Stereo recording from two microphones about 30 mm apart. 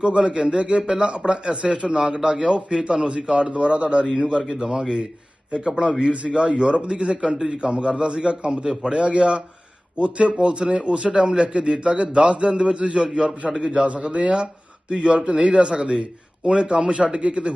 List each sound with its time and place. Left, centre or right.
0.0 s a man's voice: right
0.8 s speech: right
1.0 s a man's voice: right
3.5 s a man's voice: right
7.2 s a man's voice: right